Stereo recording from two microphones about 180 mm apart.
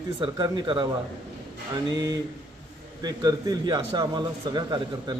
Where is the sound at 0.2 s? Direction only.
25° right (ahead or behind).